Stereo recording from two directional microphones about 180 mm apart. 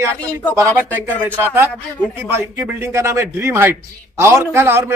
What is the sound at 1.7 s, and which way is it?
Speech, 5° left (ahead or behind).